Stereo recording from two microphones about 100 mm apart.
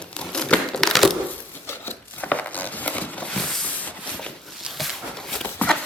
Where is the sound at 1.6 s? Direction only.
20° left (ahead or behind).